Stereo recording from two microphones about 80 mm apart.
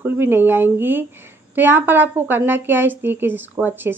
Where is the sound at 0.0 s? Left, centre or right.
Right.